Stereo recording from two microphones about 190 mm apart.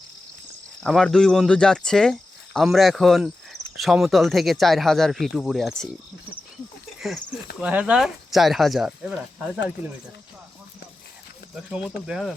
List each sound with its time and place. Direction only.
0.8 s speech: centre (ahead or behind)
7.6 s speech: 5° right (ahead or behind)
12.0 s speech: 5° right (ahead or behind)